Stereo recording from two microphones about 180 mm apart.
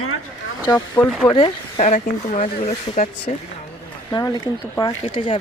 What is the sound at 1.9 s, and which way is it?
Speech, 40° left (ahead or behind).